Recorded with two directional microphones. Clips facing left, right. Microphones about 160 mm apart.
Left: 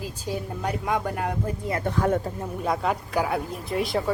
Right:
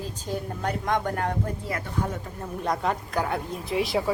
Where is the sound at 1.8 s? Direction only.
90° left.